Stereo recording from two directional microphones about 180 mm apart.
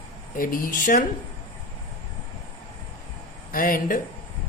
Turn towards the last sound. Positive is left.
turn(degrees=50)  # may be behind; listen again after turning